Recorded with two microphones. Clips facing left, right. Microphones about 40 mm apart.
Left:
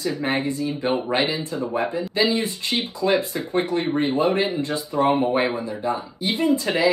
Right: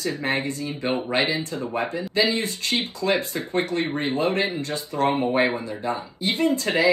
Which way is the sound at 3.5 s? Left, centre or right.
Left.